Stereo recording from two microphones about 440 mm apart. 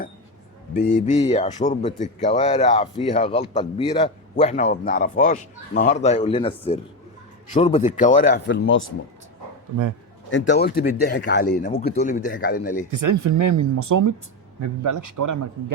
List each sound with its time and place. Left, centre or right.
0.7 s a man's voice: centre
10.3 s speech: left
13.0 s speech: right